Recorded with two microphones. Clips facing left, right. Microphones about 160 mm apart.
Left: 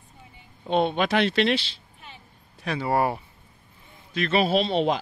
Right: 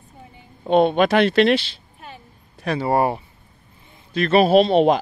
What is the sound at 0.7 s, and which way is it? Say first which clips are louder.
Speech: right 7 dB; 55° right (ahead or behind).